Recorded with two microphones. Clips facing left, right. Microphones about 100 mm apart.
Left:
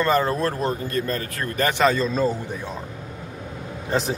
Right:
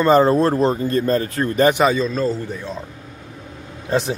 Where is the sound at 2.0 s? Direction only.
10° left (ahead or behind).